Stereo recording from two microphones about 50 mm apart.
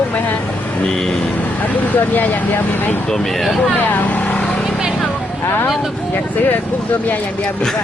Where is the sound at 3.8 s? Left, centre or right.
Left.